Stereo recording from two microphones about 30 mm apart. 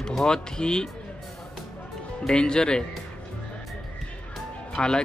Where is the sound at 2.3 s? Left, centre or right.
Left.